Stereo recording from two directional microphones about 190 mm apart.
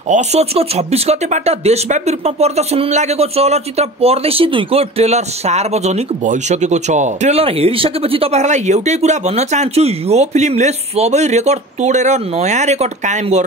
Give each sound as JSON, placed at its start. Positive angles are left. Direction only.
{"t": 0.1, "sound": "speech", "side_deg": -35}